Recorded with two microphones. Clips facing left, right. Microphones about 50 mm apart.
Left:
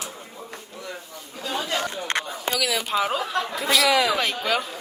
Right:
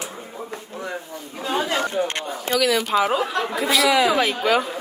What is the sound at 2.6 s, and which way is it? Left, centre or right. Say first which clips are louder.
Speech: right 5 dB; centre.